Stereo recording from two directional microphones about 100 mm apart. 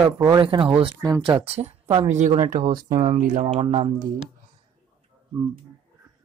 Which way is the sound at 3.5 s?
90° right.